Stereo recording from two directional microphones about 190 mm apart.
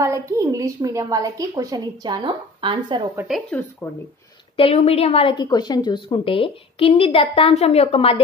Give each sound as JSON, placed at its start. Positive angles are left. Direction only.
{"t": 0.0, "sound": "a woman's voice", "side_deg": -15}
{"t": 3.3, "sound": "speech", "side_deg": 5}
{"t": 4.6, "sound": "a woman's voice", "side_deg": 30}